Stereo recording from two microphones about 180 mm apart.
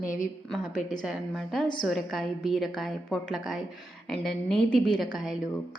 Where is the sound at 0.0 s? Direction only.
45° left (ahead or behind).